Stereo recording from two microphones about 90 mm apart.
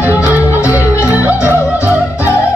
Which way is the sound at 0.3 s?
20° right (ahead or behind).